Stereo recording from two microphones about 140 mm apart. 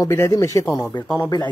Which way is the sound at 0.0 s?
20° left (ahead or behind).